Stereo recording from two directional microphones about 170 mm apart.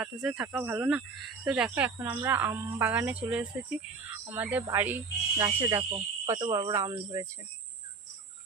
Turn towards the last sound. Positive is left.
turn(degrees=-15)  # may be behind; listen again after turning